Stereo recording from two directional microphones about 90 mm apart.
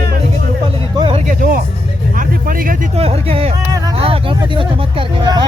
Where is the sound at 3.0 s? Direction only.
90° right.